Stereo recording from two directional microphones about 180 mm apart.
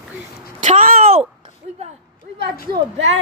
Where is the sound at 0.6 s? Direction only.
45° right (ahead or behind).